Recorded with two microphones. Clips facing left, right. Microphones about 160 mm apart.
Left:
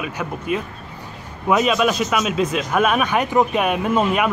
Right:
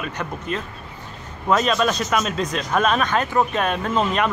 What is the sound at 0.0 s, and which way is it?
Speech, 5° left (ahead or behind).